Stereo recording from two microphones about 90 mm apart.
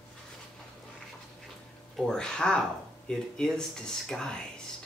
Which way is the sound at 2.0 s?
10° left (ahead or behind).